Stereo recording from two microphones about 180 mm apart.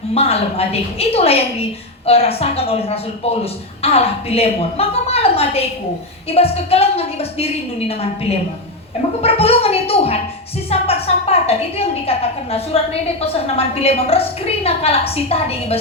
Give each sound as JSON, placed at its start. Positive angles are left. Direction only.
{"t": 0.1, "sound": "a woman's voice", "side_deg": 35}